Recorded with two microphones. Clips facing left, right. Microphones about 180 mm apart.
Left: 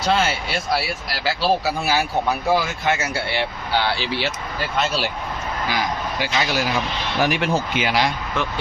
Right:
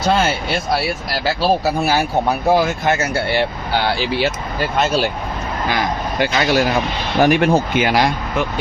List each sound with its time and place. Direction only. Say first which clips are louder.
1.2 s speech: right 3 dB; 45° right (ahead or behind)
5.6 s speech: right 4 dB; 55° right (ahead or behind)